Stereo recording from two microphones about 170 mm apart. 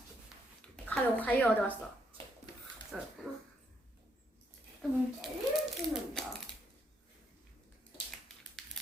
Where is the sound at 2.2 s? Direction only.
30° right (ahead or behind).